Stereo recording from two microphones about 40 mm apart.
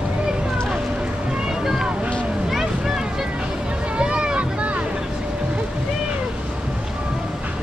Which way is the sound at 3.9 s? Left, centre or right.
Right.